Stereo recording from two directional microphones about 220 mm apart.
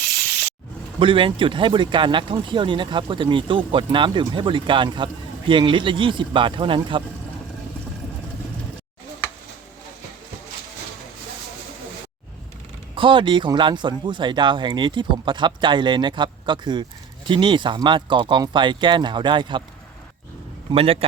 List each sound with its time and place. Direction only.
0.9 s speech: 25° right (ahead or behind)
13.0 s speech: 20° right (ahead or behind)
20.7 s speech: 25° right (ahead or behind)